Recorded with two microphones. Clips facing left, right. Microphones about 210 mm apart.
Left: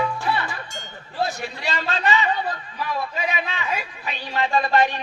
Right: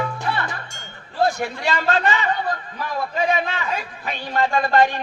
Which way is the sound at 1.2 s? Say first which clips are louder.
Right 6 dB; 50° right (ahead or behind).